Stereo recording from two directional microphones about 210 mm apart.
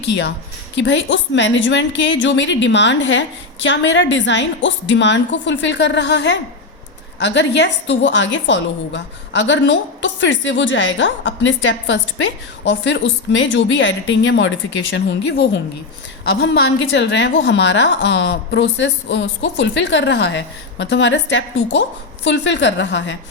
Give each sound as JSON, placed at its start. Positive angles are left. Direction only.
{"t": 0.0, "sound": "a woman's voice", "side_deg": 60}